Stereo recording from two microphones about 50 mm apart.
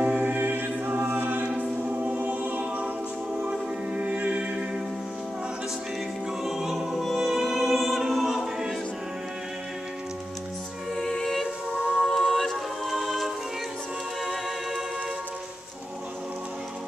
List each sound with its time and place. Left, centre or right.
0.0 s music: right
6.4 s music: centre
11.0 s music: centre
11.9 s a capella: centre